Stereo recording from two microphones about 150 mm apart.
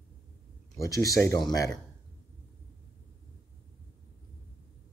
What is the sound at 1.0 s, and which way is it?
Speech, 20° left (ahead or behind).